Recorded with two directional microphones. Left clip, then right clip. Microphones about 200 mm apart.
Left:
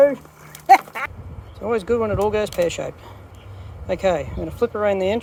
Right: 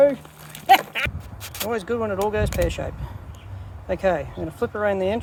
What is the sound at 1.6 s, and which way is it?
Speech, 15° left (ahead or behind).